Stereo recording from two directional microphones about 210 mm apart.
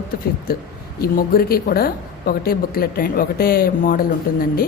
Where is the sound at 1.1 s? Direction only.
45° left (ahead or behind).